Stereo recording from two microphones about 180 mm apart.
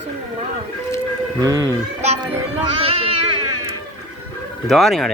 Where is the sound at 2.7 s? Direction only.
30° right (ahead or behind).